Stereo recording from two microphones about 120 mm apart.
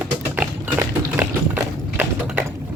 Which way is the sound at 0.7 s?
30° right (ahead or behind).